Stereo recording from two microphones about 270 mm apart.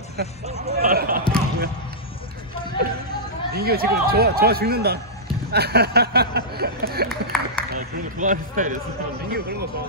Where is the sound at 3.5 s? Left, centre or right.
Right.